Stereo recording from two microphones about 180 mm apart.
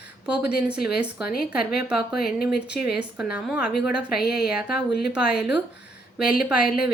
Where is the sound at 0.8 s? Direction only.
5° right (ahead or behind).